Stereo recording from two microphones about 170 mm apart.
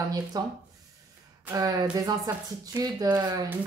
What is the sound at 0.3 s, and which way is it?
Speech, 25° right (ahead or behind).